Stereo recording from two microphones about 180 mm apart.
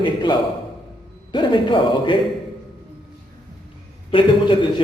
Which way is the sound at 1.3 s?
25° left (ahead or behind).